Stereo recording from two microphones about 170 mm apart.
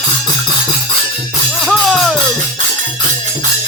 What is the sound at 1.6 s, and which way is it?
Music, centre (ahead or behind).